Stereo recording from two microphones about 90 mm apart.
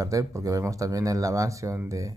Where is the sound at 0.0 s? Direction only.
40° right (ahead or behind).